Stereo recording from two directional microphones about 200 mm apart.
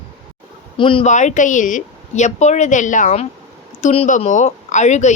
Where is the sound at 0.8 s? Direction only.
25° left (ahead or behind).